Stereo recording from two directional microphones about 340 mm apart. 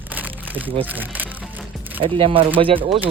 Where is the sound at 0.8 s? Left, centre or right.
Centre.